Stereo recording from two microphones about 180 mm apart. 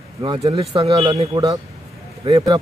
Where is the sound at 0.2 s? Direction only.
25° right (ahead or behind).